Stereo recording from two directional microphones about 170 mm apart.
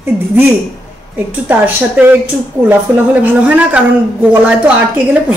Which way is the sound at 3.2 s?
10° right (ahead or behind).